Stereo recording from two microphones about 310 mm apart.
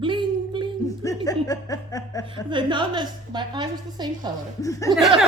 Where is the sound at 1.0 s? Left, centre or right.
Centre.